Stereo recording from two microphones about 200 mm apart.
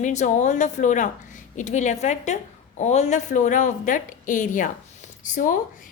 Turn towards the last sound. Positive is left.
turn(degrees=40)  # may be behind; listen again after turning